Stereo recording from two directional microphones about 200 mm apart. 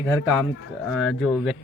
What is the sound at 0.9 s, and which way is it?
Speech, 5° left (ahead or behind).